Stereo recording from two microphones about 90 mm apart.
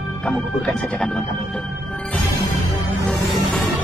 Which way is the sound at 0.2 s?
5° left (ahead or behind).